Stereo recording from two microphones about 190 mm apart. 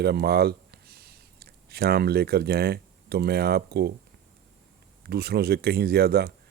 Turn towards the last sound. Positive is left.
turn(degrees=-55)  # may be behind; listen again after turning